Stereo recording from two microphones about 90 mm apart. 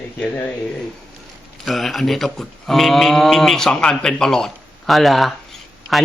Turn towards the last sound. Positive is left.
turn(degrees=0)  # may be behind; listen again after turning